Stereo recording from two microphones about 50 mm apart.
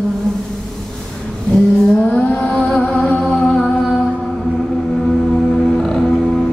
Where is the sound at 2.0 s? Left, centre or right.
Left.